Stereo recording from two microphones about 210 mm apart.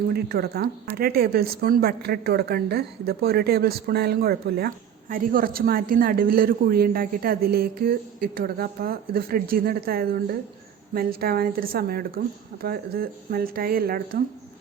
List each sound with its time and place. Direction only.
0.1 s speech: 50° right (ahead or behind)